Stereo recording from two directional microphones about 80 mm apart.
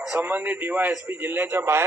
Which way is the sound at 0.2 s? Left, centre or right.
Right.